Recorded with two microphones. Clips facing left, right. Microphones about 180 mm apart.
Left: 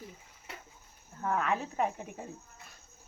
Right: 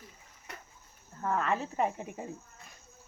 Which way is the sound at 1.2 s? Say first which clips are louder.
Even; 5° left (ahead or behind).